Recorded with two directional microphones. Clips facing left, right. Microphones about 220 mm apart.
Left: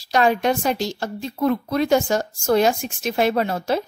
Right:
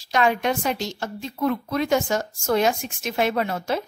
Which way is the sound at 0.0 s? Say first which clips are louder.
Left 3 dB; 35° left (ahead or behind).